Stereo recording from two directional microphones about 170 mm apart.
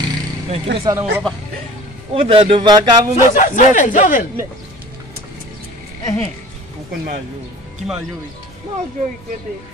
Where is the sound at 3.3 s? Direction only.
50° left (ahead or behind).